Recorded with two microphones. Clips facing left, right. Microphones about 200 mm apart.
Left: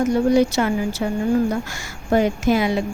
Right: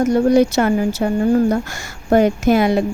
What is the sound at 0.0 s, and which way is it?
Speech, 40° right (ahead or behind).